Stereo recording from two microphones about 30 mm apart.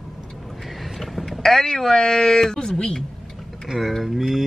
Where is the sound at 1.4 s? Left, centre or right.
Centre.